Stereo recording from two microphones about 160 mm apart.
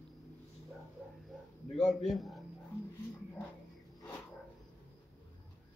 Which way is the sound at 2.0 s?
Centre (ahead or behind).